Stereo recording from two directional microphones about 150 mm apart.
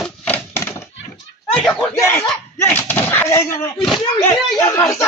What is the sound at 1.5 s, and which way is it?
A man's voice, 5° left (ahead or behind).